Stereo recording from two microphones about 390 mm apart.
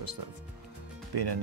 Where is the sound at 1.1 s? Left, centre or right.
Right.